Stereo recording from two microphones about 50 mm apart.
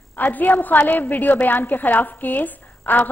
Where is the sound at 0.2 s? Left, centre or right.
Left.